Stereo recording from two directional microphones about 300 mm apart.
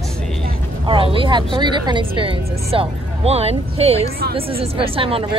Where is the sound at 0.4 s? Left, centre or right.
Centre.